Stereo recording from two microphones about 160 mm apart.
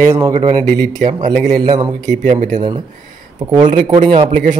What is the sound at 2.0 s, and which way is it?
Speech, 50° right (ahead or behind).